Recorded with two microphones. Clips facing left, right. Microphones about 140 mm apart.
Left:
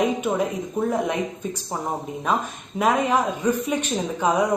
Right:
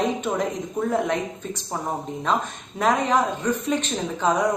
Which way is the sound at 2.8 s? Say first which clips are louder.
Even; 10° left (ahead or behind).